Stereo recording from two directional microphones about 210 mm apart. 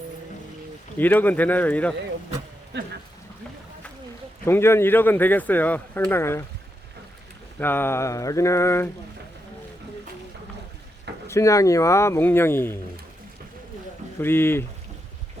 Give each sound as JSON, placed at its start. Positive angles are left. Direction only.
{"t": 0.9, "sound": "speech", "side_deg": 10}
{"t": 2.7, "sound": "speech", "side_deg": -55}
{"t": 4.4, "sound": "speech", "side_deg": 10}
{"t": 7.6, "sound": "speech", "side_deg": 10}
{"t": 11.3, "sound": "speech", "side_deg": 15}
{"t": 14.2, "sound": "speech", "side_deg": 10}